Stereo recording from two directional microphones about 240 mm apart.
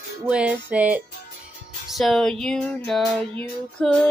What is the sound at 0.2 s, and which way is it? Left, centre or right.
Child singing, centre.